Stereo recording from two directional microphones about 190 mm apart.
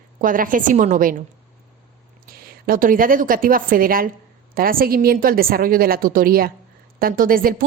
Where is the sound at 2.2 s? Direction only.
50° right (ahead or behind).